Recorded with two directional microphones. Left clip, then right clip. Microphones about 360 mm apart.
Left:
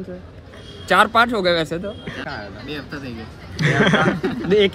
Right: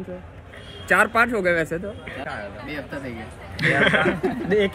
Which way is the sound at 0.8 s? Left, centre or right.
Left.